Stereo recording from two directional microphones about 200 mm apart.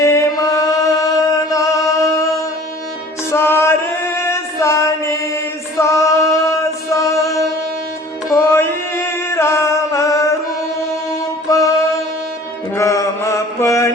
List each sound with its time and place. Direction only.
0.0 s music: 15° left (ahead or behind)
3.3 s singing: 10° left (ahead or behind)
8.3 s music: 10° left (ahead or behind)
11.4 s music: 15° left (ahead or behind)
12.7 s mantra: 15° left (ahead or behind)